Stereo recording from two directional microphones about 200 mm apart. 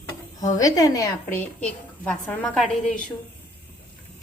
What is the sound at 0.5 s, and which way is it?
A woman's voice, 15° left (ahead or behind).